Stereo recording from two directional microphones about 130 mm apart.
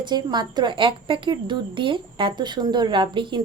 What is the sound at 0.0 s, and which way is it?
A woman's voice, 35° right (ahead or behind).